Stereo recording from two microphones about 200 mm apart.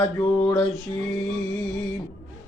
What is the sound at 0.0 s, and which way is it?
Mantra, 5° left (ahead or behind).